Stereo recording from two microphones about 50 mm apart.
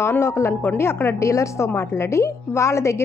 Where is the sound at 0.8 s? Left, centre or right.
Left.